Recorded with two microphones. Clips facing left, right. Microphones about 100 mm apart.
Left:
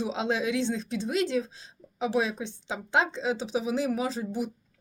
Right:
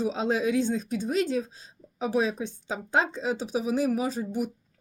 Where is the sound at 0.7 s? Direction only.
45° right (ahead or behind).